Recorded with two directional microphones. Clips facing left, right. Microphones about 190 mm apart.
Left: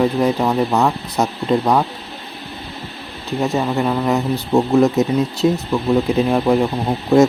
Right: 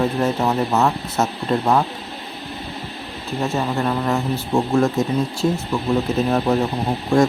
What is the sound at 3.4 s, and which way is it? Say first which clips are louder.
Speech: left 3 dB; 15° left (ahead or behind).